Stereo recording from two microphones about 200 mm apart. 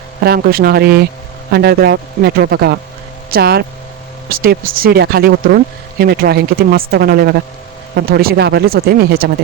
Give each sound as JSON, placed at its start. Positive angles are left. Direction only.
{"t": 0.2, "sound": "speech", "side_deg": -50}